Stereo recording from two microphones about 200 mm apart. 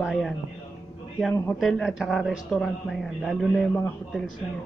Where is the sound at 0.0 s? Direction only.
Centre (ahead or behind).